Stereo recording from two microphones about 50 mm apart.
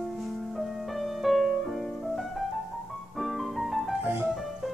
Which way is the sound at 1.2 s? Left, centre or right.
Centre.